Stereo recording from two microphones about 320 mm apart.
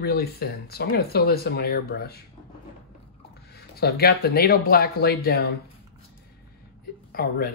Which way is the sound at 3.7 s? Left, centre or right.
Left.